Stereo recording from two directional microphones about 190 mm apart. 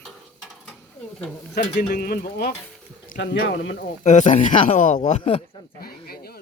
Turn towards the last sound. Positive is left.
turn(degrees=55)  # may be behind; listen again after turning